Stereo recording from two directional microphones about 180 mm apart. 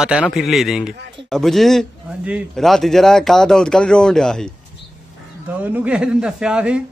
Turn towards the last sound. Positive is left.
turn(degrees=-5)  # may be behind; listen again after turning